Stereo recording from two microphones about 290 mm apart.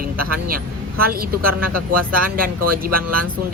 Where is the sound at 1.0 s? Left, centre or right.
Right.